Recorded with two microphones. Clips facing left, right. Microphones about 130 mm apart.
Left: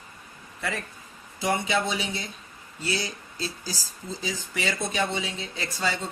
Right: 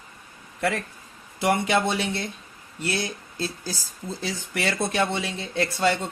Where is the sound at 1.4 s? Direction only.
65° right (ahead or behind).